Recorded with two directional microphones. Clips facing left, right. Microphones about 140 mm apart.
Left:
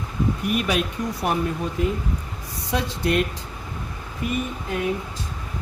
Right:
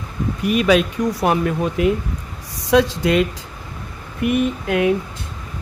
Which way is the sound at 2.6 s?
90° right.